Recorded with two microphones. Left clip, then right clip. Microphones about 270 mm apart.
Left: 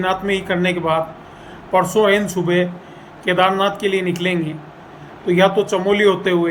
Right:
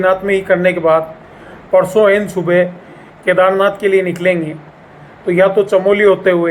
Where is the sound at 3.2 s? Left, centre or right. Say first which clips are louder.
Right 5 dB; centre.